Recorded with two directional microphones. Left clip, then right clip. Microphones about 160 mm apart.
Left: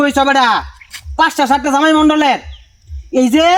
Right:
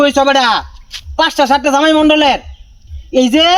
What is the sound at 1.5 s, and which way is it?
Speech, 20° left (ahead or behind).